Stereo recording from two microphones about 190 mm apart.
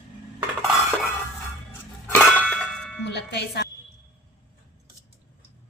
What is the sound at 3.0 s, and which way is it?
Speech, 65° left (ahead or behind).